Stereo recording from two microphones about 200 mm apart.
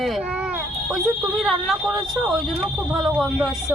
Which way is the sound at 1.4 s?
Centre (ahead or behind).